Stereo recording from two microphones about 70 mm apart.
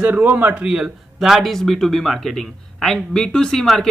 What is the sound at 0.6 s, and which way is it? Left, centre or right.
Speech, centre.